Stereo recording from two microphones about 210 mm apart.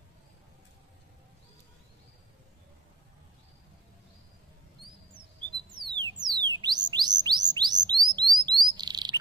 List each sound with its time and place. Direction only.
5.8 s music: 20° right (ahead or behind)
7.2 s bird: 20° right (ahead or behind)
8.2 s chirp: 20° right (ahead or behind)